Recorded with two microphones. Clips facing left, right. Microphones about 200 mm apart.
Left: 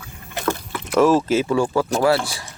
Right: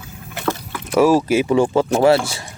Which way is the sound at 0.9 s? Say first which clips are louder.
Right 2 dB; 10° right (ahead or behind).